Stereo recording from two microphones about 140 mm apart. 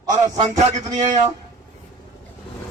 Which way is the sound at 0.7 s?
55° right (ahead or behind).